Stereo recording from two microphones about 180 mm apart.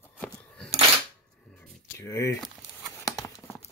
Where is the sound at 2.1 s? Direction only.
15° left (ahead or behind).